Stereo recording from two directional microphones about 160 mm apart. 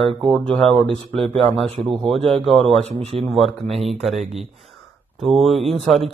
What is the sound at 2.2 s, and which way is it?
Speech, 35° right (ahead or behind).